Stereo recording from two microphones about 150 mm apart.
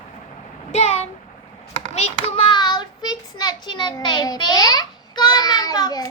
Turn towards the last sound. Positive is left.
turn(degrees=25)  # may be behind; listen again after turning